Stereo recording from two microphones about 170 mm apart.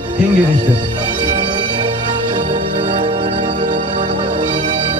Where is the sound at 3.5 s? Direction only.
50° right (ahead or behind).